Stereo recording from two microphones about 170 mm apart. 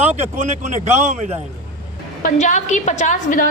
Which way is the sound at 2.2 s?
45° left (ahead or behind).